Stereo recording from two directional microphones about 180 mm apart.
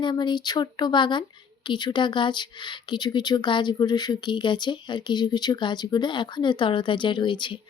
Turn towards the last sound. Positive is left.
turn(degrees=25)  # may be behind; listen again after turning